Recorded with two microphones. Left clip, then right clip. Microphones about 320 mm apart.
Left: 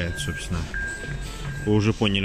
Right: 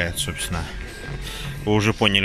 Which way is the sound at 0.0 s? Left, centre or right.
Centre.